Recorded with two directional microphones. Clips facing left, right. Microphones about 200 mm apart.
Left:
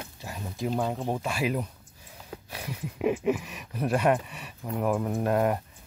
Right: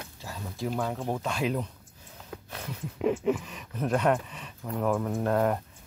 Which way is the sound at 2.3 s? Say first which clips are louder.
Left 1 dB; 10° left (ahead or behind).